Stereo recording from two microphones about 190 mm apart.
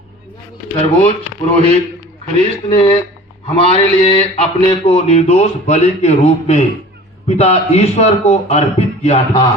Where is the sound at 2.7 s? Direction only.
30° left (ahead or behind).